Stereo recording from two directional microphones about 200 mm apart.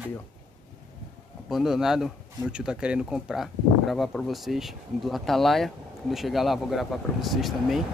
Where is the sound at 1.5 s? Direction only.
Centre (ahead or behind).